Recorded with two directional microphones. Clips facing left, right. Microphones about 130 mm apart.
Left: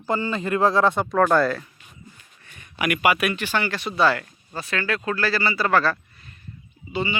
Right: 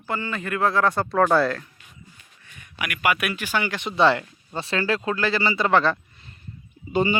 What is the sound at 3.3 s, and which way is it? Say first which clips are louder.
Speech: left 1 dB; 10° right (ahead or behind).